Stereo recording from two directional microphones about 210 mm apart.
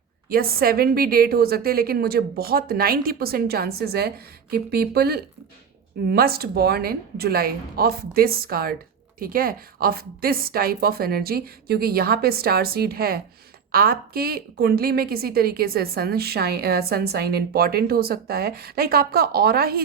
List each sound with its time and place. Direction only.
0.3 s a woman's voice: 45° right (ahead or behind)